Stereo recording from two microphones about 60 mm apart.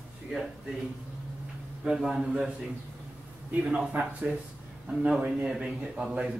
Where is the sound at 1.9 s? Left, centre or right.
Centre.